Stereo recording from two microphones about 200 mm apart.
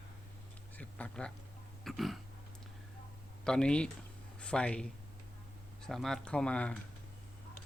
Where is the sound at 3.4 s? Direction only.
5° left (ahead or behind).